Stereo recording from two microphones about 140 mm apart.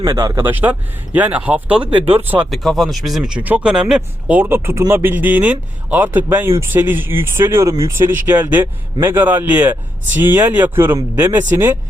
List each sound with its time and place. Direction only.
0.0 s speech: 25° right (ahead or behind)
0.5 s speech: 10° right (ahead or behind)
1.9 s speech: 40° right (ahead or behind)
2.5 s speech: centre (ahead or behind); by 11.8 s 15° right (ahead or behind)